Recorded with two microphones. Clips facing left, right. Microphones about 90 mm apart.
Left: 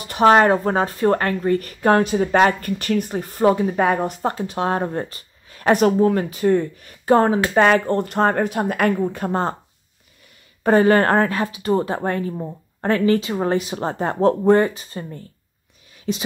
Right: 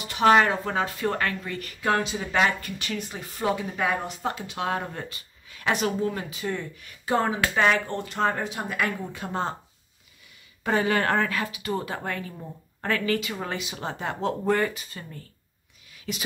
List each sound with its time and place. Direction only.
0.0 s speech: 40° left (ahead or behind)
10.6 s speech: 45° left (ahead or behind)